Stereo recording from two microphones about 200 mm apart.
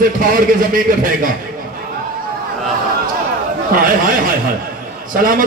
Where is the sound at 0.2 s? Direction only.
45° right (ahead or behind).